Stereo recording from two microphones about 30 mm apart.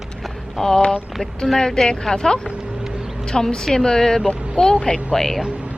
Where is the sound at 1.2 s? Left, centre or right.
Left.